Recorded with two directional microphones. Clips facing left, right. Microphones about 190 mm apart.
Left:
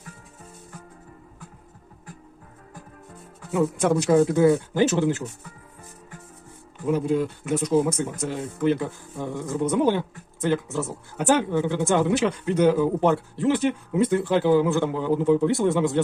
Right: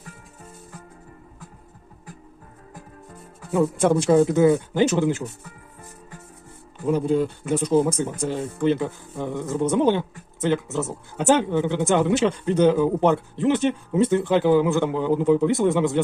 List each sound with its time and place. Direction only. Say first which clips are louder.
3.5 s speech: right 2 dB; 30° right (ahead or behind)
6.8 s speech: right 2 dB; 30° right (ahead or behind)